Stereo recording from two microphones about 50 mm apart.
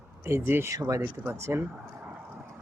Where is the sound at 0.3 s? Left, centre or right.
Right.